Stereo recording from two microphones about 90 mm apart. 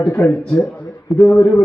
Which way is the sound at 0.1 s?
35° left (ahead or behind).